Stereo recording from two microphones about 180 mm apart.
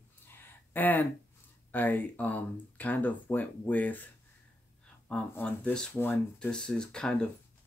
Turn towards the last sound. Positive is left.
turn(degrees=5)  # may be behind; listen again after turning